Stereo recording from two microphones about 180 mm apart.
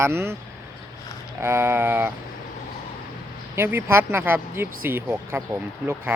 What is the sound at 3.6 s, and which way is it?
Speech, 15° right (ahead or behind).